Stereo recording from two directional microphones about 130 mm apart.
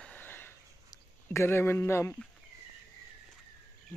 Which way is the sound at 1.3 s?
20° left (ahead or behind).